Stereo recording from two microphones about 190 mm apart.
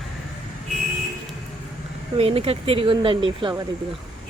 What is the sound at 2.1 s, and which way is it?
Speech, 30° right (ahead or behind).